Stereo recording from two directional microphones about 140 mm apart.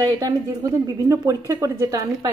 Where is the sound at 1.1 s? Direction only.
20° right (ahead or behind).